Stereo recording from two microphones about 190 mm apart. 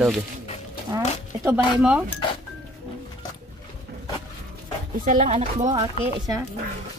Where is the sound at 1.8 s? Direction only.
5° right (ahead or behind).